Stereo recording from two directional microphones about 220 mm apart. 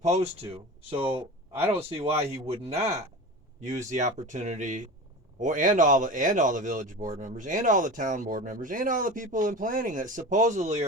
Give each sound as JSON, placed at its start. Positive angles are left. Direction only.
{"t": 0.0, "sound": "speech", "side_deg": -30}
{"t": 1.5, "sound": "speech", "side_deg": -10}
{"t": 1.9, "sound": "speech", "side_deg": -25}